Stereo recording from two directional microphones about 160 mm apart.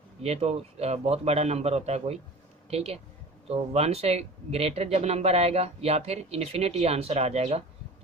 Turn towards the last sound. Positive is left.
turn(degrees=-40)  # may be behind; listen again after turning